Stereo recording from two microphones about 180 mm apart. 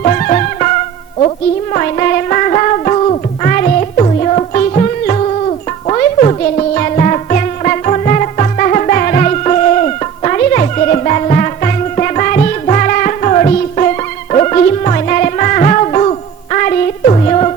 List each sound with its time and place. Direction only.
0.0 s music: 40° left (ahead or behind)
1.7 s music: 45° left (ahead or behind)
10.5 s music: 45° left (ahead or behind)